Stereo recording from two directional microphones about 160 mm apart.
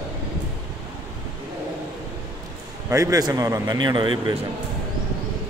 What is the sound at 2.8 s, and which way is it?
A man's voice, 20° right (ahead or behind).